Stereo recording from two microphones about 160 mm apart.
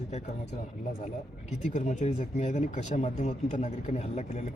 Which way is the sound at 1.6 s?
50° left (ahead or behind).